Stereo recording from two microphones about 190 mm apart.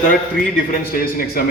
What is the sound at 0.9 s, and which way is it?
Speech, 50° left (ahead or behind).